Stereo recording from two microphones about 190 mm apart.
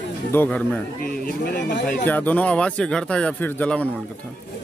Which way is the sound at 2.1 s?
10° left (ahead or behind).